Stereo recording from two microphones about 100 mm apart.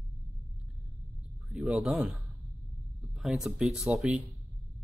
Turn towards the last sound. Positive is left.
turn(degrees=-5)  # may be behind; listen again after turning